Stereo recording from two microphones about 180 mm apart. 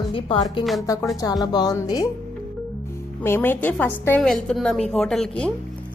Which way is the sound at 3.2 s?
10° left (ahead or behind).